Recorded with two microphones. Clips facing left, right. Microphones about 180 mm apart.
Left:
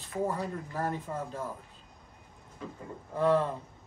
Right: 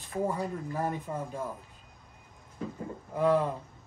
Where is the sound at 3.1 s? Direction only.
10° right (ahead or behind).